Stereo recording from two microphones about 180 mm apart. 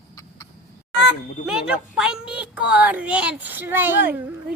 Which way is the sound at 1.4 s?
5° right (ahead or behind).